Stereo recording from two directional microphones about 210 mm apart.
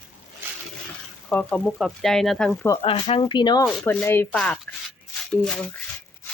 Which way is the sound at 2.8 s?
30° left (ahead or behind).